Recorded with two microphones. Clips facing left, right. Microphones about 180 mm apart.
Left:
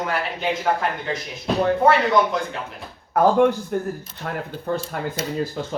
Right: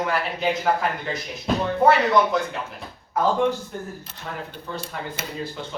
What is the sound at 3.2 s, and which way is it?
Speech, 60° left (ahead or behind).